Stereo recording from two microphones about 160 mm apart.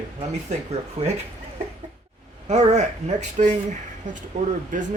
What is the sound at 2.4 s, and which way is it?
Speech, 45° right (ahead or behind).